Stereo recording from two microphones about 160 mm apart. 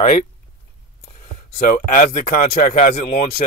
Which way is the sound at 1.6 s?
60° left (ahead or behind).